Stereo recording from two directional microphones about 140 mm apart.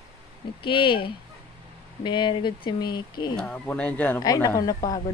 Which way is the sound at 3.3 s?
5° left (ahead or behind).